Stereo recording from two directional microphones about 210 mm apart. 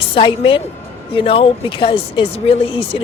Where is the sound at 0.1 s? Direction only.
25° left (ahead or behind).